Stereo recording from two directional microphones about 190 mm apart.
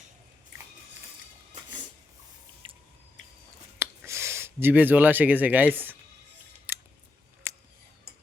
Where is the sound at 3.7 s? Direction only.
15° right (ahead or behind).